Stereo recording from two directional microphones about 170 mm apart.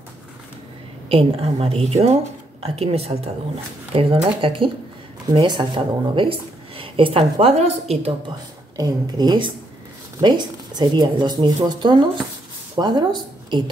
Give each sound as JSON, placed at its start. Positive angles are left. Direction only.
{"t": 1.0, "sound": "a woman's voice", "side_deg": -35}
{"t": 8.7, "sound": "speech", "side_deg": -25}